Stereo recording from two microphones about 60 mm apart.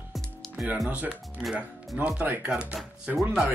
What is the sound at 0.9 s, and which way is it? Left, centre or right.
Speech, right.